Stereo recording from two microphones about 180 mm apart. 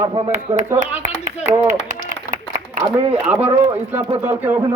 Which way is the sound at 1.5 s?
40° right (ahead or behind).